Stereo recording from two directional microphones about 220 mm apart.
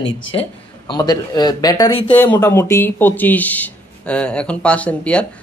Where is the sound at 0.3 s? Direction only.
20° left (ahead or behind).